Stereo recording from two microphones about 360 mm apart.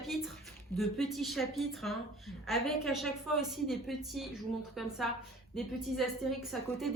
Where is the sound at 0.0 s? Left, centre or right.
Centre.